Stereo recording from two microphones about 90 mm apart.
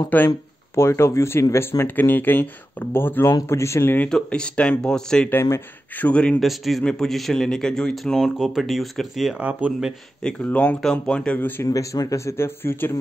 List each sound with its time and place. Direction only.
0.1 s speech: 15° left (ahead or behind)
0.7 s speech: 30° left (ahead or behind)
4.1 s speech: 10° left (ahead or behind)
5.3 s speech: 30° left (ahead or behind)
5.9 s speech: 15° left (ahead or behind)
6.4 s speech: centre (ahead or behind)
9.4 s speech: 20° right (ahead or behind)
9.7 s speech: 5° right (ahead or behind)
10.2 s speech: 15° left (ahead or behind)
11.6 s speech: 40° left (ahead or behind)